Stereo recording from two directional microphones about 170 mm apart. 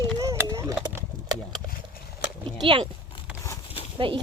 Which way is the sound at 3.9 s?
30° right (ahead or behind).